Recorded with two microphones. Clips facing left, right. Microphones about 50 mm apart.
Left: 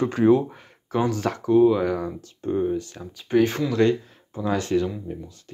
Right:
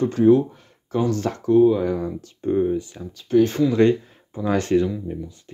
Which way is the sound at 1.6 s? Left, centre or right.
Left.